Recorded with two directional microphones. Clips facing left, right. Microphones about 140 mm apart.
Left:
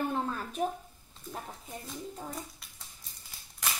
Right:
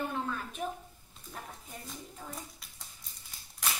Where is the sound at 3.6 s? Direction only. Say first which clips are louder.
Even; centre (ahead or behind).